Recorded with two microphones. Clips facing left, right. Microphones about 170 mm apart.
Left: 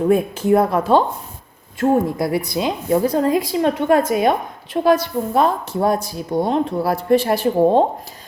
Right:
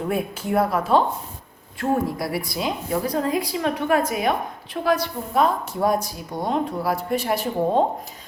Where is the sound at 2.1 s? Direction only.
20° left (ahead or behind).